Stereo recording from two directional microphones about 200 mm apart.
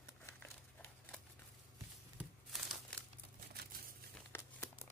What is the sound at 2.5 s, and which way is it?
Crumpling, centre (ahead or behind).